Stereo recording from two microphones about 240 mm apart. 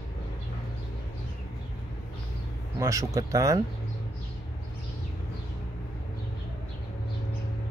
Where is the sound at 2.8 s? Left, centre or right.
Centre.